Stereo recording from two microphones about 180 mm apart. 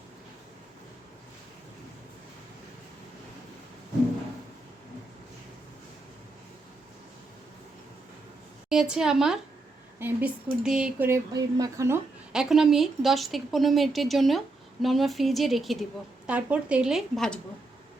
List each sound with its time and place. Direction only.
8.7 s a woman's voice: 5° right (ahead or behind)
11.3 s speech: 20° right (ahead or behind)
12.3 s a woman's voice: 5° right (ahead or behind)